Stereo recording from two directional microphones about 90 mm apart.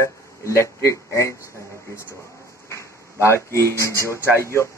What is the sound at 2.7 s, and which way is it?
Speech, 30° left (ahead or behind).